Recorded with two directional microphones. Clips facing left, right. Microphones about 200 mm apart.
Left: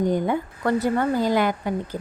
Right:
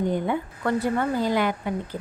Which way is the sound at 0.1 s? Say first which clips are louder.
Left 3 dB; 40° left (ahead or behind).